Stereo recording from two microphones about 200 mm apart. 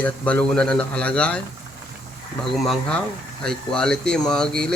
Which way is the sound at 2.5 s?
Centre (ahead or behind).